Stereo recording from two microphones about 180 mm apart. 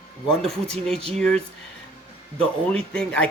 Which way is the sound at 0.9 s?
30° right (ahead or behind).